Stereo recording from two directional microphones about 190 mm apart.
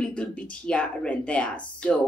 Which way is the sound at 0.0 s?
5° left (ahead or behind).